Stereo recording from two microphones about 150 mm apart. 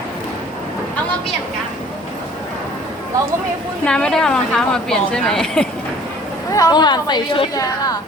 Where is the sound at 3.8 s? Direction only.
5° left (ahead or behind).